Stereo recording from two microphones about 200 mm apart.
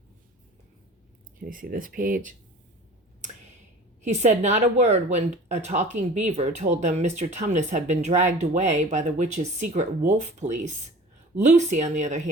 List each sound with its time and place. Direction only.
1.4 s speech: 45° right (ahead or behind)
4.0 s speech: 35° right (ahead or behind)